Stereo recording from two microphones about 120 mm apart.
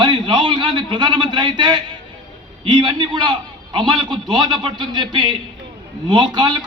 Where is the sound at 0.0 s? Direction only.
40° right (ahead or behind).